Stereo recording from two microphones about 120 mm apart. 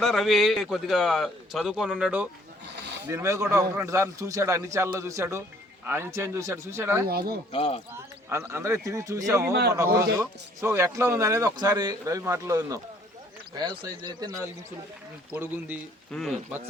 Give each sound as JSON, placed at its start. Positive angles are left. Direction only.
{"t": 0.0, "sound": "speech", "side_deg": 0}
{"t": 3.1, "sound": "a man's voice", "side_deg": -25}
{"t": 7.5, "sound": "speech", "side_deg": 55}
{"t": 8.3, "sound": "a man's voice", "side_deg": -20}
{"t": 12.0, "sound": "a man's voice", "side_deg": -25}
{"t": 13.6, "sound": "speech", "side_deg": -35}
{"t": 15.3, "sound": "speech", "side_deg": -15}
{"t": 16.1, "sound": "speech", "side_deg": 5}